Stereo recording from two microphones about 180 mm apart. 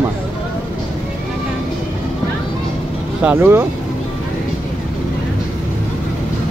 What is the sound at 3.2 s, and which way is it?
Speech, 10° right (ahead or behind).